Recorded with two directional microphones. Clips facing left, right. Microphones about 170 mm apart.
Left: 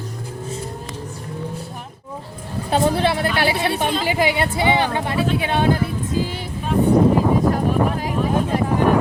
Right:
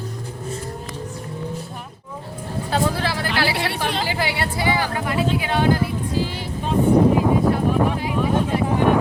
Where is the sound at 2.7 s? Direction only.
25° left (ahead or behind).